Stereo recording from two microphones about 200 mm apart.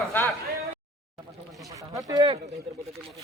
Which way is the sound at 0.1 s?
10° left (ahead or behind).